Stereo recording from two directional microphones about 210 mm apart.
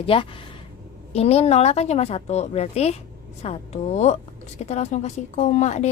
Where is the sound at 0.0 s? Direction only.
25° left (ahead or behind).